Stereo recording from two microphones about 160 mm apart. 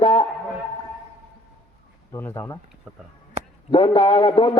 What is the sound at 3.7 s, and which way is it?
Speech, 30° left (ahead or behind).